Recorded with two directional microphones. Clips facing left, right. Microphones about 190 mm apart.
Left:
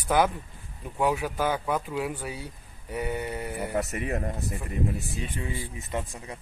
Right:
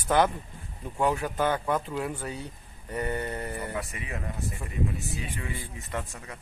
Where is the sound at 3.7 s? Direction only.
45° left (ahead or behind).